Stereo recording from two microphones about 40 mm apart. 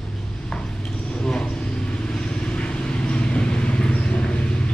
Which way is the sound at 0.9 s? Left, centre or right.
Left.